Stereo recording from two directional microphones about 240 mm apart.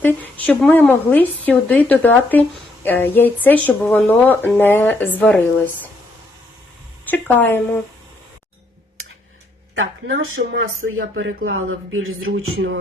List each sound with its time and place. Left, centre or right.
0.0 s speech: centre
7.1 s speech: centre
10.3 s speech: right